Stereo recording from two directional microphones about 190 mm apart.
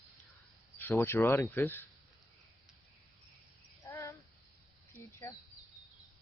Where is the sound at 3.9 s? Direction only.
15° left (ahead or behind).